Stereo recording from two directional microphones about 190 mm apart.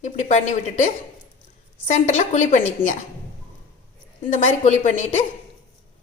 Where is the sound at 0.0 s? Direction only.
40° left (ahead or behind).